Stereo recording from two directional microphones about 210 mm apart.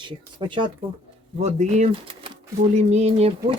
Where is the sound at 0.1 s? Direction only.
25° right (ahead or behind).